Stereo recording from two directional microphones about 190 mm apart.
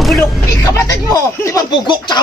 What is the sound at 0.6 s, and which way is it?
A woman's voice, 15° left (ahead or behind).